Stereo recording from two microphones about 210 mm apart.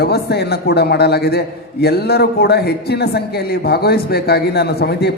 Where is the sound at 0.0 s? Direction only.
50° left (ahead or behind).